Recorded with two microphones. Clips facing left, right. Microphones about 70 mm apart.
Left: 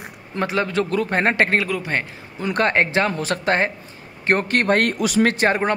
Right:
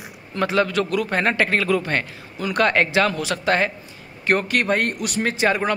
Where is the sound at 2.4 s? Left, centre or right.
Left.